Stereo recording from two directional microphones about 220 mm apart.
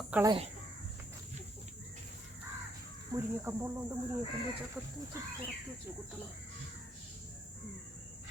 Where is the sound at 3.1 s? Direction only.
10° right (ahead or behind).